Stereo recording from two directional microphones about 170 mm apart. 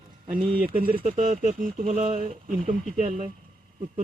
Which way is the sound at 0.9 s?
45° right (ahead or behind).